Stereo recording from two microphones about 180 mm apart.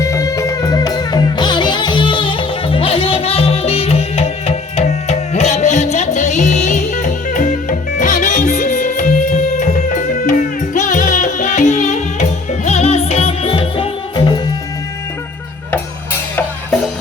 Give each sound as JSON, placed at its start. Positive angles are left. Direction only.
{"t": 0.0, "sound": "music", "side_deg": 15}